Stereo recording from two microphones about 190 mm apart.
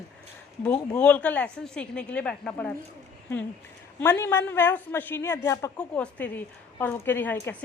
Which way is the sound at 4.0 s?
10° left (ahead or behind).